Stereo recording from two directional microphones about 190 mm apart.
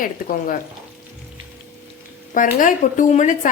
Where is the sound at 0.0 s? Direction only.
45° left (ahead or behind).